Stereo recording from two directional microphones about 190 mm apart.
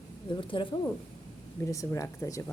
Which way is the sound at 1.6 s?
15° left (ahead or behind).